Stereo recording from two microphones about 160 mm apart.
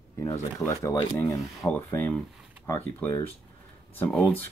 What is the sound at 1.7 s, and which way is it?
Speech, 10° left (ahead or behind).